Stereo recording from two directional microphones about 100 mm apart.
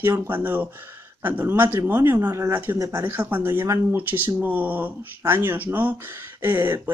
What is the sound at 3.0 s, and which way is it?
Speech, 20° right (ahead or behind).